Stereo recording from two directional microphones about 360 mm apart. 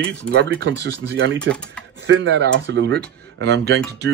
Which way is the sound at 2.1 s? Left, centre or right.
Right.